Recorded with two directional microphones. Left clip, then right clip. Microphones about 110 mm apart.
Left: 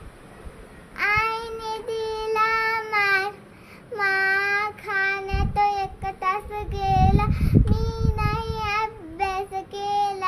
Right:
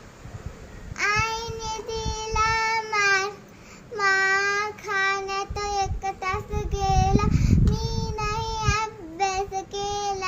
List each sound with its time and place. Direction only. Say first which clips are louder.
0.9 s child singing: left 2 dB; 40° left (ahead or behind)